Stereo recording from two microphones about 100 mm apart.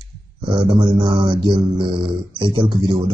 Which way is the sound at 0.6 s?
45° right (ahead or behind).